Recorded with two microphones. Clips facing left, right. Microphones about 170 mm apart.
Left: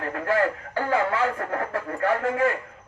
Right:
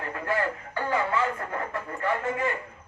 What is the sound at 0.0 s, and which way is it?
Radio, 65° left (ahead or behind).